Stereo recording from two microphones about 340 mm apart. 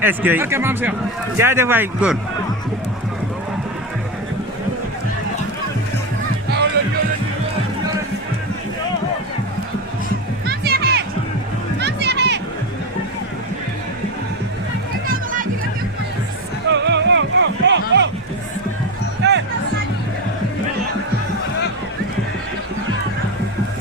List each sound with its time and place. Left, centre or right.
0.0 s a man's voice: centre
6.8 s music: right
10.4 s music: right
15.0 s music: right
16.6 s music: right
19.2 s music: right